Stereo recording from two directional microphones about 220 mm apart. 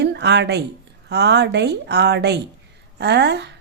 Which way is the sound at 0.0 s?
50° right (ahead or behind).